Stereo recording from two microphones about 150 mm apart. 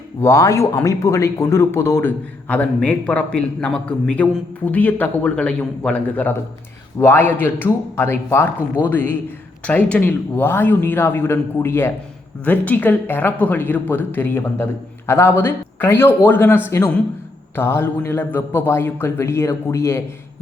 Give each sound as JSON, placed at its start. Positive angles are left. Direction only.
{"t": 0.2, "sound": "speech", "side_deg": 20}